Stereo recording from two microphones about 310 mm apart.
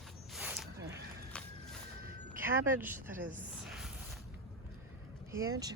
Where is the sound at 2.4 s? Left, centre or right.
Centre.